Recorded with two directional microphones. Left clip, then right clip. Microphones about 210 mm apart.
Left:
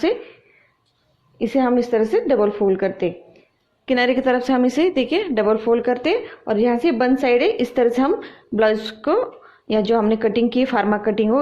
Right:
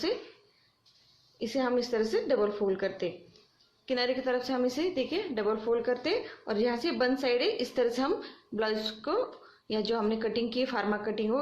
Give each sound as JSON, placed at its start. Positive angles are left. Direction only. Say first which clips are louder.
{"t": 1.4, "sound": "a woman's voice", "louder": "left 11 dB", "side_deg": 35}